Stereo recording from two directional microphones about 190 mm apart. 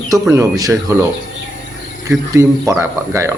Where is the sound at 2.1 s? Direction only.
15° right (ahead or behind).